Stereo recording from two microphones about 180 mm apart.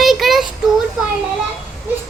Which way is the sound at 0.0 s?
Centre (ahead or behind).